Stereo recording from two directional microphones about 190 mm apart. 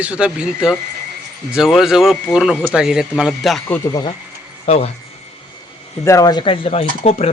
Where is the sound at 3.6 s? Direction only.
15° left (ahead or behind).